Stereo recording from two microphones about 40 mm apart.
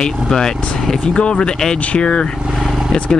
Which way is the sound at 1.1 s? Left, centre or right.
Left.